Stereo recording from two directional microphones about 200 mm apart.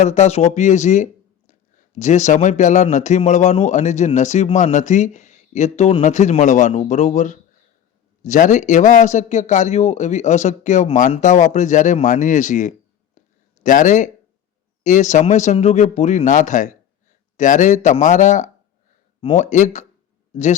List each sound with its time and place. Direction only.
0.0 s speech: 35° left (ahead or behind)
13.1 s a sound: 40° left (ahead or behind)
14.8 s speech: 35° left (ahead or behind)